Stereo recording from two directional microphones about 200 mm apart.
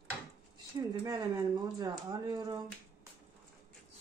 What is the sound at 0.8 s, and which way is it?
Speech, 20° right (ahead or behind).